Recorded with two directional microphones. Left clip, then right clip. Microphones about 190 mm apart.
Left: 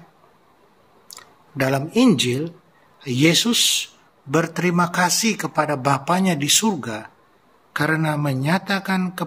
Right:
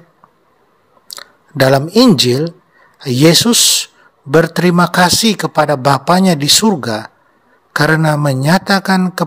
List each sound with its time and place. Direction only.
1.1 s a man's voice: 50° right (ahead or behind)